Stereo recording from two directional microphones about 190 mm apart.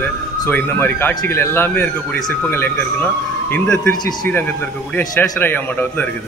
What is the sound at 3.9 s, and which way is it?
Speech, 20° left (ahead or behind).